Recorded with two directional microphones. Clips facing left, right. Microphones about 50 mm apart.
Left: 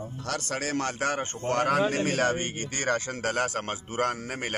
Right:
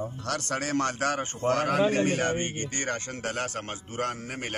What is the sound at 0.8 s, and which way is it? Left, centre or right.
Speech, centre.